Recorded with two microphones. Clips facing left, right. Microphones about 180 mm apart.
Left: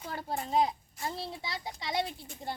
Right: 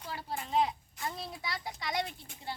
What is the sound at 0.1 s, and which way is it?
A child's voice, 45° left (ahead or behind).